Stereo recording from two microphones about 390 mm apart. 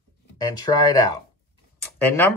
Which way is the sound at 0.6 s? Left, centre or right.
Centre.